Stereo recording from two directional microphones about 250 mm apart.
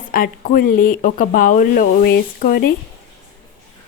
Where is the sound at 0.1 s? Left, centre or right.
Left.